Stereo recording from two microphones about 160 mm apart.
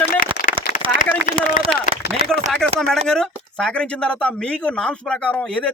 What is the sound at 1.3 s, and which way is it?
Speech, 55° left (ahead or behind).